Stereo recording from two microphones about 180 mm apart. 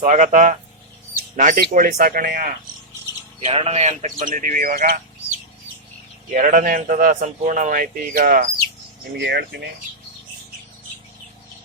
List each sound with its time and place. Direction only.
0.0 s speech: 45° right (ahead or behind)
3.4 s speech: 35° right (ahead or behind); by 4.9 s 50° right (ahead or behind)
6.3 s speech: 50° right (ahead or behind)
9.1 s speech: 70° right (ahead or behind)